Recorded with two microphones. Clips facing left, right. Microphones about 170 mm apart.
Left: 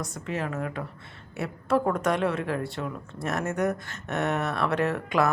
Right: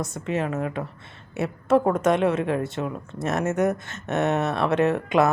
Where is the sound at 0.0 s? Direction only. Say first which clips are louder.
Right 5 dB; 25° right (ahead or behind).